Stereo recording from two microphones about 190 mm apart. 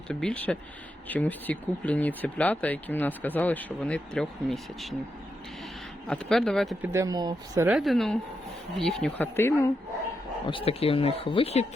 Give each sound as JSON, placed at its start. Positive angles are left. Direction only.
{"t": 0.1, "sound": "speech", "side_deg": 5}
{"t": 6.1, "sound": "speech", "side_deg": 0}
{"t": 6.8, "sound": "speech", "side_deg": -15}
{"t": 7.8, "sound": "speech", "side_deg": 0}
{"t": 10.4, "sound": "speech", "side_deg": 30}